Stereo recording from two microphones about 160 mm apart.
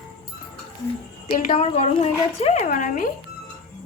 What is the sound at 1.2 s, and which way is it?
A woman's voice, 40° left (ahead or behind).